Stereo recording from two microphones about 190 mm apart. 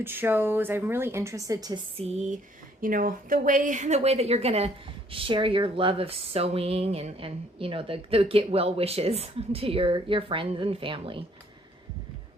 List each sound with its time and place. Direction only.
0.0 s a woman's voice: 10° right (ahead or behind)
2.0 s a woman's voice: 35° right (ahead or behind)